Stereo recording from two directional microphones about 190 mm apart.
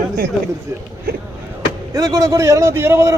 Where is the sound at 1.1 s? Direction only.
50° right (ahead or behind).